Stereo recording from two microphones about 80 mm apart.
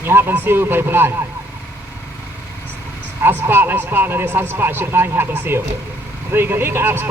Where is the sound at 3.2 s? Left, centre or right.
Right.